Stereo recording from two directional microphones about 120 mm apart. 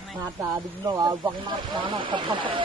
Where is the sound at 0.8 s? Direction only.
30° right (ahead or behind).